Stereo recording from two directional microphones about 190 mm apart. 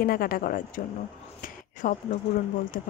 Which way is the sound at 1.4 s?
45° left (ahead or behind).